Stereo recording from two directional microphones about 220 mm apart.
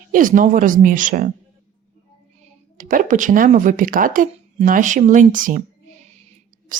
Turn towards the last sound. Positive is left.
turn(degrees=-35)  # may be behind; listen again after turning